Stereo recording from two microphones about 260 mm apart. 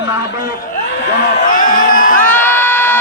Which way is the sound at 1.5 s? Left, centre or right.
Left.